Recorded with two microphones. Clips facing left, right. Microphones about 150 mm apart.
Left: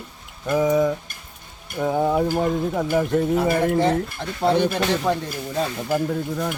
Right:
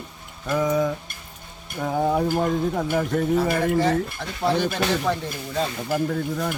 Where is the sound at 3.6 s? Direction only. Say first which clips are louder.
Left 1 dB; 20° left (ahead or behind).